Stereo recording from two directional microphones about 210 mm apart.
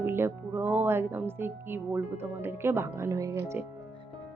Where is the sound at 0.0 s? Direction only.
10° right (ahead or behind).